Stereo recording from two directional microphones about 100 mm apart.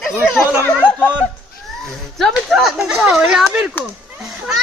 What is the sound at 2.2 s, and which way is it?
A child's voice, centre (ahead or behind).